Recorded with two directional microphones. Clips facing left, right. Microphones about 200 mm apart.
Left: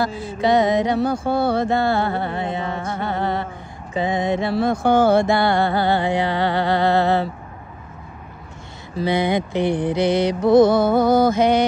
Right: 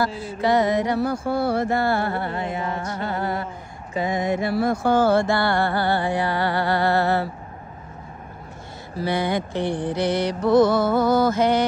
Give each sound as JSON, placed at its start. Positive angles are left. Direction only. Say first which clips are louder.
{"t": 0.0, "sound": "mantra", "louder": "left 2 dB", "side_deg": 20}
{"t": 3.9, "sound": "mantra", "louder": "left 2 dB", "side_deg": 30}
{"t": 8.9, "sound": "mantra", "louder": "left 4 dB", "side_deg": 20}